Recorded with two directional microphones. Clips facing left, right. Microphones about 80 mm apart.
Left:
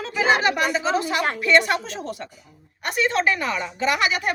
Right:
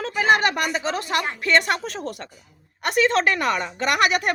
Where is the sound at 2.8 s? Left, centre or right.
Right.